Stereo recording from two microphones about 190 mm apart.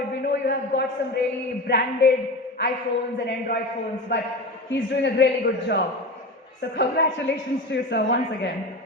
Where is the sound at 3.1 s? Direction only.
65° left (ahead or behind).